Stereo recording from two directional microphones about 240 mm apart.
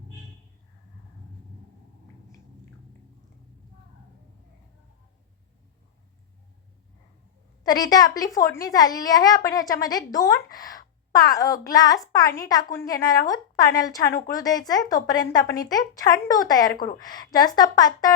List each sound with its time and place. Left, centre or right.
7.6 s a woman's voice: centre